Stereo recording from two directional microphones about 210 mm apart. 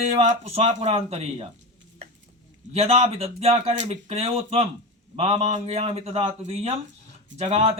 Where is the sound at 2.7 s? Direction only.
30° right (ahead or behind).